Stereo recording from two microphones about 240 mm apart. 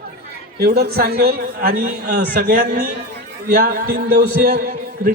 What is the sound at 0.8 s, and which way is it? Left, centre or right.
A man's voice, right.